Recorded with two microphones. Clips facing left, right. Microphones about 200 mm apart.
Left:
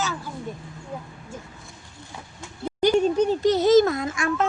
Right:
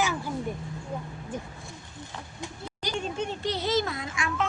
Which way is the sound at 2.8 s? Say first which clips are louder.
Left 14 dB; 55° left (ahead or behind).